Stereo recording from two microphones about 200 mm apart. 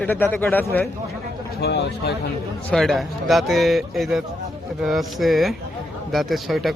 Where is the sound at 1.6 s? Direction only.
55° left (ahead or behind).